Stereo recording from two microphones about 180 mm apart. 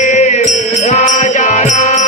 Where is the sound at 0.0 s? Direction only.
45° left (ahead or behind).